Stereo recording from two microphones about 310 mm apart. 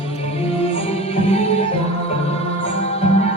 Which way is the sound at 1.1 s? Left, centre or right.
Centre.